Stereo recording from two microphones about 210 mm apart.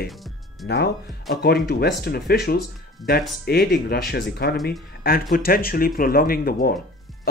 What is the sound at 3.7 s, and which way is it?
Speech, 50° left (ahead or behind).